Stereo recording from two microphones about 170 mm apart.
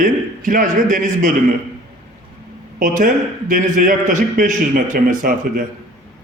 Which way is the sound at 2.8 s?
50° right (ahead or behind).